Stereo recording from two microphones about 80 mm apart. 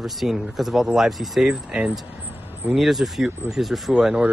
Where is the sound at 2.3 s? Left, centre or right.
Right.